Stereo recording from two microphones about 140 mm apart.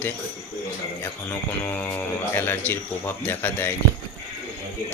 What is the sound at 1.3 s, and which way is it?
Speech, 15° left (ahead or behind).